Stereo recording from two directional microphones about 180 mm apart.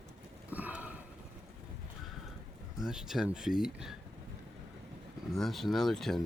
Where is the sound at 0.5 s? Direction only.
10° right (ahead or behind).